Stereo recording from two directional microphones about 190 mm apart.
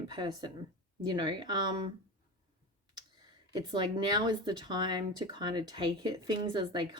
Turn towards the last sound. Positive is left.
turn(degrees=-25)  # may be behind; listen again after turning